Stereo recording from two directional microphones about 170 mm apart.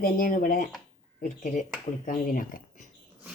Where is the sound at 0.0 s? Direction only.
55° left (ahead or behind).